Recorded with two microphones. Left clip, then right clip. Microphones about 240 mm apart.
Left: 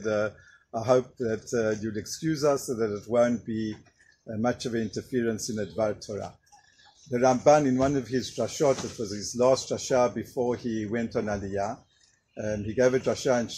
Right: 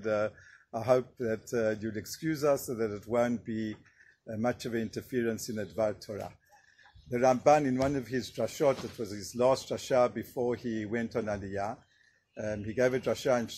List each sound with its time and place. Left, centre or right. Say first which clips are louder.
0.0 s speech: left 3 dB; right